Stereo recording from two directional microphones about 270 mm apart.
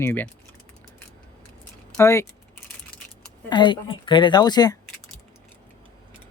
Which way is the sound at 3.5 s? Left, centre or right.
Centre.